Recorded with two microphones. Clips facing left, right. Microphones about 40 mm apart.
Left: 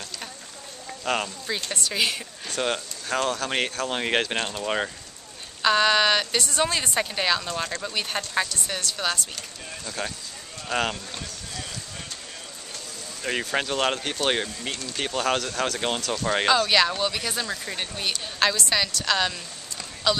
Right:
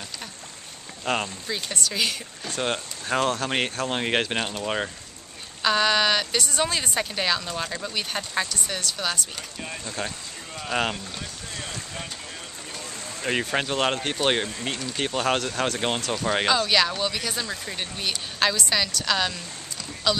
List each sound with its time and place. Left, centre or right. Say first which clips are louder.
1.1 s speech: even; right
1.7 s speech: left 1 dB; centre
3.1 s speech: right 2 dB; centre
3.4 s speech: right 1 dB; centre
13.2 s speech: right 1 dB; centre